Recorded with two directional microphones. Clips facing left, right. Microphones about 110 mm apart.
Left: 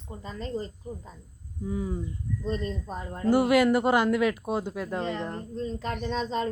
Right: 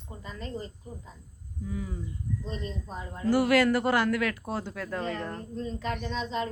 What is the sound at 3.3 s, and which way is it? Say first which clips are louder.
Speech: left 2 dB; 20° left (ahead or behind).